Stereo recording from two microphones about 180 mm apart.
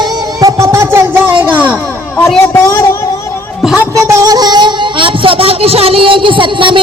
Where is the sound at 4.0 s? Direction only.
15° right (ahead or behind).